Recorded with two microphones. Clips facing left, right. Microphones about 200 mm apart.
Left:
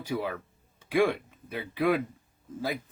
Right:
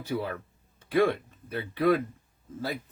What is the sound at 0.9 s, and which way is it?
Speech, 10° left (ahead or behind).